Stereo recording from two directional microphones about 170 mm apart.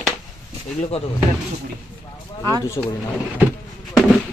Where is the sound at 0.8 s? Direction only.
35° left (ahead or behind).